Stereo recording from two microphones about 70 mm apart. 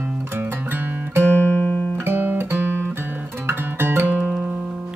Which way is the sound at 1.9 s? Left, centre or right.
Right.